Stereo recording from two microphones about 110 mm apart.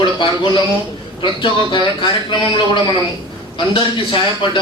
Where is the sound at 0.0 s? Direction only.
45° left (ahead or behind).